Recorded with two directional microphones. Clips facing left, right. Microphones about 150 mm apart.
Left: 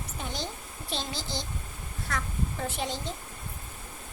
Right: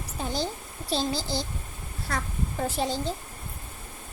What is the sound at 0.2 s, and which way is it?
A woman's voice, 35° right (ahead or behind).